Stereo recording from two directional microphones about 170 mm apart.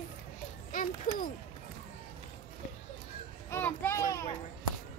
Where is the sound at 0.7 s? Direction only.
55° left (ahead or behind).